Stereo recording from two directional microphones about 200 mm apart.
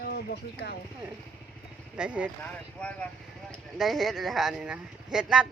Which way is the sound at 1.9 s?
5° right (ahead or behind).